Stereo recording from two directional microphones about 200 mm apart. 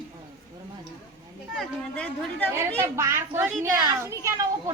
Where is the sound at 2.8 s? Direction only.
10° right (ahead or behind).